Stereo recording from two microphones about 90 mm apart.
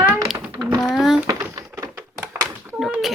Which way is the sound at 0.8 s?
5° right (ahead or behind).